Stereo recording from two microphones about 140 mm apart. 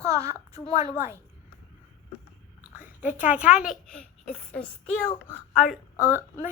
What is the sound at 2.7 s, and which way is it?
A child's voice, 10° right (ahead or behind).